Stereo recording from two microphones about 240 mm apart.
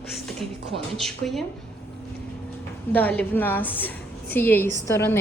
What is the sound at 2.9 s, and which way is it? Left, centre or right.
A woman's voice, centre.